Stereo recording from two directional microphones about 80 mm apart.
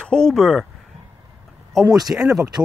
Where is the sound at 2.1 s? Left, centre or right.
Right.